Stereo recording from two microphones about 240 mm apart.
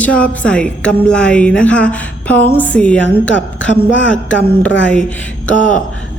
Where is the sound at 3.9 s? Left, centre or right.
Left.